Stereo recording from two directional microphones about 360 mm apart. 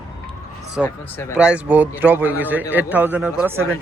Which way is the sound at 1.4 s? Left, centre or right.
Centre.